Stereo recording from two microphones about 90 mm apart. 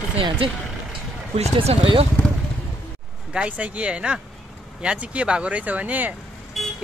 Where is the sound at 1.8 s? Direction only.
90° right.